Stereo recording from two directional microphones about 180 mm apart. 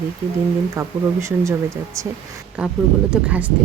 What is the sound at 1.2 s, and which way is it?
Speech, 15° right (ahead or behind).